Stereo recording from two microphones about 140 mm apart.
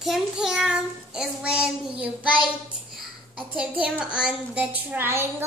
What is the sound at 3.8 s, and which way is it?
A child's voice, 5° right (ahead or behind).